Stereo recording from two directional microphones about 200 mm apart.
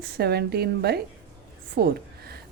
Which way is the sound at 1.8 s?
50° right (ahead or behind).